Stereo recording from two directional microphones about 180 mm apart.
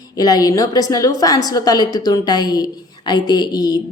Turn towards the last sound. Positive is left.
turn(degrees=25)  # may be behind; listen again after turning